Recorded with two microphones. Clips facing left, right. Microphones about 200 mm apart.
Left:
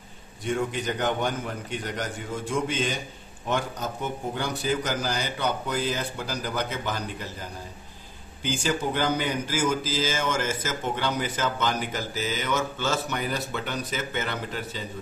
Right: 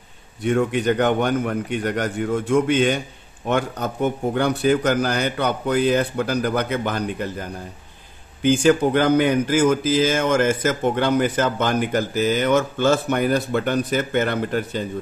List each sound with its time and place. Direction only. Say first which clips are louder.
0.4 s speech: right 8 dB; 65° right (ahead or behind)